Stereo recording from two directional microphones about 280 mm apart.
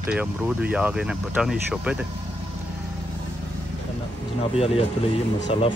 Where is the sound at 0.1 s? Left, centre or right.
Centre.